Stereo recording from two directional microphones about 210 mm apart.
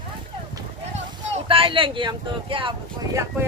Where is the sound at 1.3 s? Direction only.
25° right (ahead or behind).